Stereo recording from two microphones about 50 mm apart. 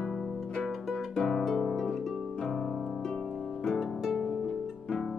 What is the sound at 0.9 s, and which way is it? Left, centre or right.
Music, centre.